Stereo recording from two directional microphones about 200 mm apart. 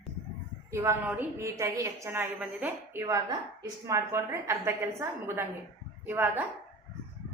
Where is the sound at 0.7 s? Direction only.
15° right (ahead or behind).